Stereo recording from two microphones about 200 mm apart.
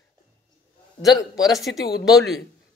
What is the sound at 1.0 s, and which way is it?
Speech, 20° left (ahead or behind).